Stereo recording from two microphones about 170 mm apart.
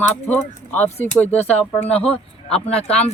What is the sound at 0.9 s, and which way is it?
Speech, 40° left (ahead or behind).